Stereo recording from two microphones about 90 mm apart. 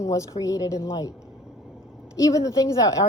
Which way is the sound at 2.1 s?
40° left (ahead or behind).